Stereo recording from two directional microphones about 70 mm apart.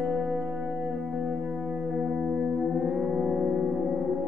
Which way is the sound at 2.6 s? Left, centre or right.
Centre.